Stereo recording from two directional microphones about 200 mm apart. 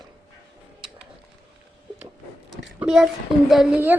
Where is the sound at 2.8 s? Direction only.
5° right (ahead or behind).